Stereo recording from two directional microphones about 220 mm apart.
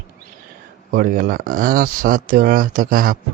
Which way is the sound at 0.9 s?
40° right (ahead or behind).